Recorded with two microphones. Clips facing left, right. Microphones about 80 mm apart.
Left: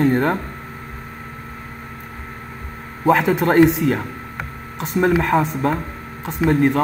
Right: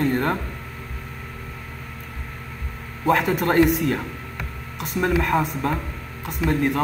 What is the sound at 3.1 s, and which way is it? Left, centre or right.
Speech, left.